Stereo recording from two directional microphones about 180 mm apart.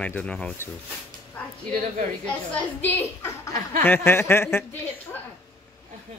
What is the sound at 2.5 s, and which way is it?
A woman's voice, 10° left (ahead or behind).